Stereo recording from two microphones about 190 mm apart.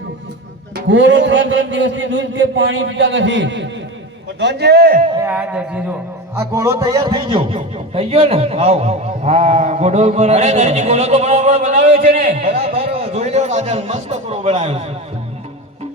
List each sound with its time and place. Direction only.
0.9 s a man's voice: 75° right (ahead or behind); by 5.0 s 50° right (ahead or behind)
5.2 s a sound: 5° right (ahead or behind)
6.3 s a man's voice: 15° right (ahead or behind); by 14.9 s 35° right (ahead or behind)